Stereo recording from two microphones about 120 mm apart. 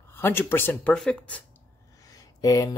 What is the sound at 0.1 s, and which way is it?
Speech, 20° left (ahead or behind).